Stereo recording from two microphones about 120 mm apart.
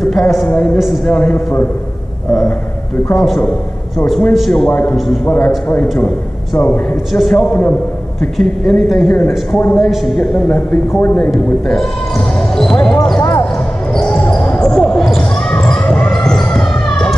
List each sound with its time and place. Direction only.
0.0 s a woman's voice: centre (ahead or behind)
1.1 s a woman's voice: 10° left (ahead or behind)
3.2 s a woman's voice: 5° left (ahead or behind)
5.7 s a woman's voice: 15° left (ahead or behind)
7.1 s a woman's voice: centre (ahead or behind)
7.3 s a woman's voice: 10° left (ahead or behind)
11.1 s a woman's voice: 5° left (ahead or behind)
12.5 s basketball bounce: 5° left (ahead or behind)
13.2 s basketball bounce: 25° left (ahead or behind)
13.9 s basketball bounce: 5° left (ahead or behind)